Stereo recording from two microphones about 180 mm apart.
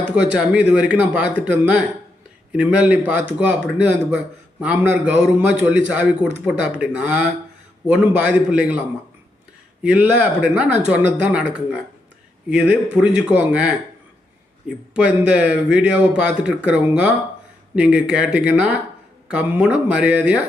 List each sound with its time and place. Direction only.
0.2 s a man's voice: 5° right (ahead or behind)
9.8 s a man's voice: 10° right (ahead or behind)
14.9 s a man's voice: 5° right (ahead or behind)